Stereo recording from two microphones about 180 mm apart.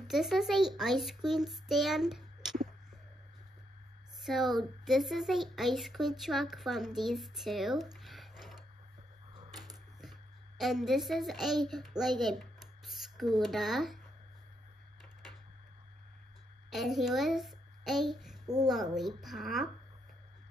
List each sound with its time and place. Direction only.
0.1 s speech: centre (ahead or behind)
4.2 s speech: centre (ahead or behind)
10.6 s a child's voice: centre (ahead or behind)
16.7 s a child's voice: centre (ahead or behind)
18.4 s a sound: 20° right (ahead or behind)
18.9 s speech: centre (ahead or behind)